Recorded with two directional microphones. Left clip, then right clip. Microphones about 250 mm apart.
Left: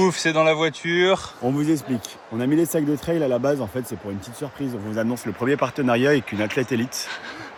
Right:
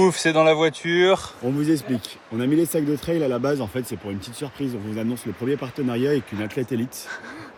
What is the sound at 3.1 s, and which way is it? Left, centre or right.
Speech, centre.